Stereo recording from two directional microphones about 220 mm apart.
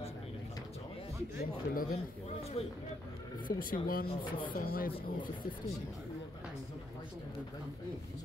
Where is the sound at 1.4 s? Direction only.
40° left (ahead or behind).